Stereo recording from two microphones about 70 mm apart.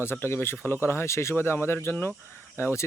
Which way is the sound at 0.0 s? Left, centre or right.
Left.